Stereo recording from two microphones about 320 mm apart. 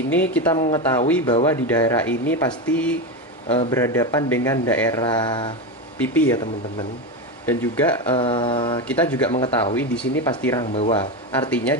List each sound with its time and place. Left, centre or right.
0.1 s speech: centre
6.3 s speech: centre
8.2 s speech: centre
8.8 s speech: centre
9.3 s speech: centre
11.5 s speech: centre